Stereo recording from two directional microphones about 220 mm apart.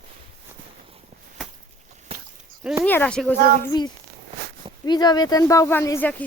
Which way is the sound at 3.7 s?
20° left (ahead or behind).